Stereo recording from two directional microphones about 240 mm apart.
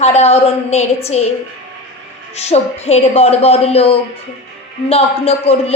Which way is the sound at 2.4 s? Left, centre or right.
Left.